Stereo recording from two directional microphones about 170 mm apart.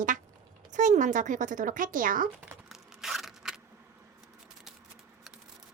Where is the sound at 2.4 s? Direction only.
5° right (ahead or behind).